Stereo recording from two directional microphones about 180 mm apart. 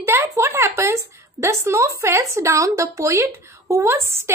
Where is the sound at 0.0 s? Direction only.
15° right (ahead or behind).